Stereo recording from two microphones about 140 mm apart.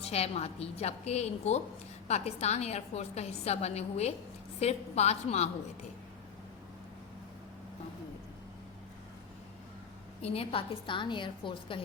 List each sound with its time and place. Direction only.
0.0 s a woman's voice: 45° left (ahead or behind)
10.2 s a woman's voice: 45° left (ahead or behind)